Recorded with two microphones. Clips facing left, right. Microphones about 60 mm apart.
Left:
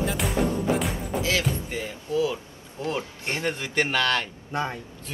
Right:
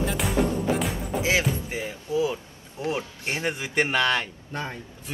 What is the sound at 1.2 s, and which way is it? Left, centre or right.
Speech, centre.